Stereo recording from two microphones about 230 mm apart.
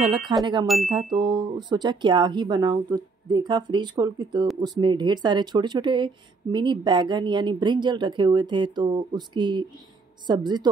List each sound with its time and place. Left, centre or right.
0.3 s speech: centre
0.7 s a sound: centre
1.1 s speech: centre